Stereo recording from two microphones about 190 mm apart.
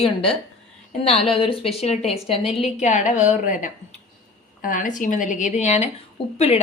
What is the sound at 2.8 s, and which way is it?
A woman's voice, 40° left (ahead or behind).